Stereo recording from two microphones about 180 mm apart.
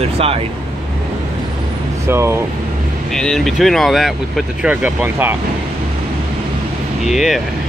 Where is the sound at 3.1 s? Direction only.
5° left (ahead or behind).